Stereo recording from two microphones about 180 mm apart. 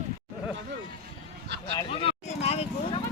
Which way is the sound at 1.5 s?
70° right (ahead or behind).